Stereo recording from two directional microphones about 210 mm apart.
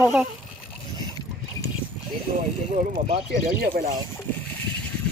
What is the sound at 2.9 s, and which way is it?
Speech, 25° right (ahead or behind).